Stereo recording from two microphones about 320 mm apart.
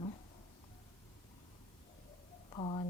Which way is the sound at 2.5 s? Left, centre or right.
Centre.